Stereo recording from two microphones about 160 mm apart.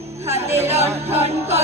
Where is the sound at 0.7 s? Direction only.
40° right (ahead or behind).